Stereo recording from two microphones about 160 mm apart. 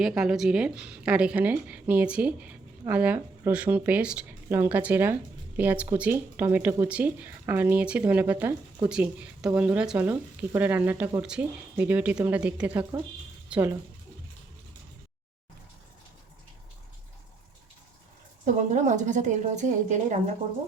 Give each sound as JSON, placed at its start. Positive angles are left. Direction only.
{"t": 0.0, "sound": "a woman's voice", "side_deg": -5}
{"t": 18.4, "sound": "a woman's voice", "side_deg": -50}